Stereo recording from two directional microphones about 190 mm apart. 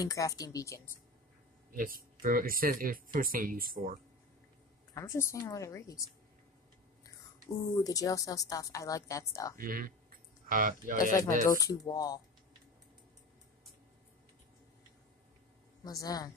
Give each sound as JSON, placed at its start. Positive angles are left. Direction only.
{"t": 0.0, "sound": "a woman's voice", "side_deg": 20}
{"t": 1.7, "sound": "speech", "side_deg": -50}
{"t": 4.9, "sound": "a woman's voice", "side_deg": 15}
{"t": 7.4, "sound": "a woman's voice", "side_deg": 20}
{"t": 9.6, "sound": "speech", "side_deg": -45}
{"t": 11.5, "sound": "speech", "side_deg": 20}
{"t": 15.8, "sound": "speech", "side_deg": 20}